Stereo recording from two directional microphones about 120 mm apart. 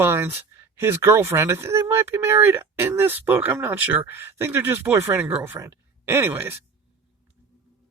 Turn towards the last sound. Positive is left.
turn(degrees=-20)  # may be behind; listen again after turning